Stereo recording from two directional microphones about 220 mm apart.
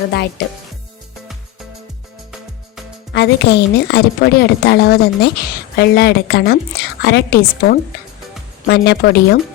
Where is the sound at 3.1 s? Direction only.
50° left (ahead or behind).